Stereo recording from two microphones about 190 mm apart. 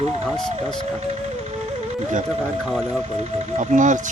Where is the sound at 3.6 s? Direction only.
40° right (ahead or behind).